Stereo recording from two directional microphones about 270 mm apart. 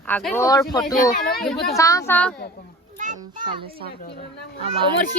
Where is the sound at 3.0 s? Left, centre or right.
Right.